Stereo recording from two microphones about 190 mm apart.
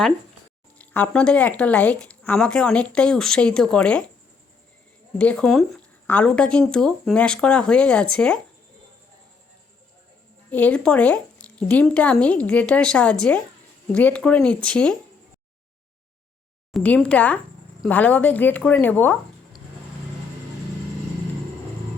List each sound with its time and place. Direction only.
0.8 s speech: 10° left (ahead or behind)
5.1 s speech: 5° left (ahead or behind)
10.5 s a woman's voice: 5° left (ahead or behind)
16.7 s a woman's voice: 5° left (ahead or behind)